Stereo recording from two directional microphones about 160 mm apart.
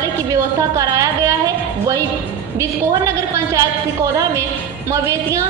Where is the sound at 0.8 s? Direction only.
20° right (ahead or behind).